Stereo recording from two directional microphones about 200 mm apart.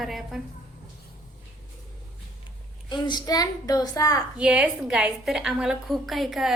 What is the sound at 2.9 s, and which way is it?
A woman's voice, 20° left (ahead or behind).